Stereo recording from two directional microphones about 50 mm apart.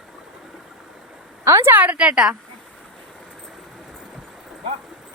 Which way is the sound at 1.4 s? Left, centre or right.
Right.